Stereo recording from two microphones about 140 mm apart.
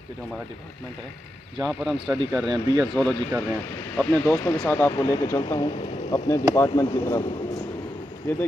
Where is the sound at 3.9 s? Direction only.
15° left (ahead or behind).